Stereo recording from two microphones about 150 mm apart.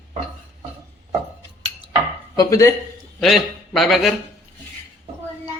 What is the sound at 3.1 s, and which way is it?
Speech, centre (ahead or behind).